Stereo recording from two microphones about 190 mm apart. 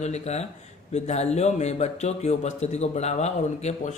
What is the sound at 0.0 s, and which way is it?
Speech, 35° left (ahead or behind).